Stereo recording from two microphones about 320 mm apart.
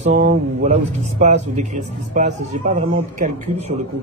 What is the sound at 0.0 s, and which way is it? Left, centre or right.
Speech, right.